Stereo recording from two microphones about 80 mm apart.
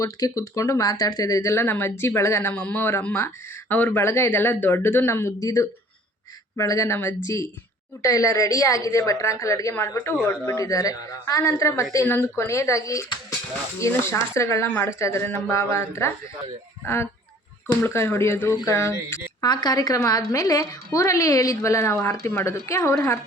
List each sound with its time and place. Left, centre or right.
0.0 s a woman's voice: left
1.6 s speech: left
2.5 s speech: left
5.4 s a woman's voice: left
8.0 s a woman's voice: left
12.0 s speech: left
19.4 s a woman's voice: left